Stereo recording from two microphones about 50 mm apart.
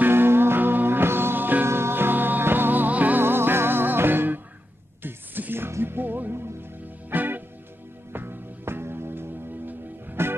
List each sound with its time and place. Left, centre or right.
0.0 s music: right
1.7 s music: right
3.2 s music: right